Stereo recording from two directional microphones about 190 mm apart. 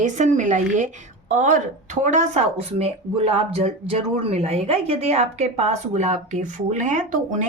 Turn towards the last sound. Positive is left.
turn(degrees=-40)  # may be behind; listen again after turning